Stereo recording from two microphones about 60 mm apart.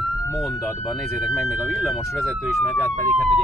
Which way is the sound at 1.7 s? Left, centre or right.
Centre.